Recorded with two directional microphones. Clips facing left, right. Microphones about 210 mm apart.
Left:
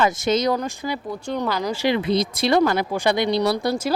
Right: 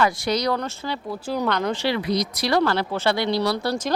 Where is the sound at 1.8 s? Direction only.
20° left (ahead or behind).